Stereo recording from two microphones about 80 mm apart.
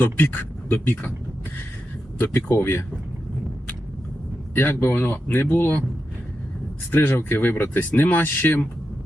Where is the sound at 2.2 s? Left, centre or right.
Left.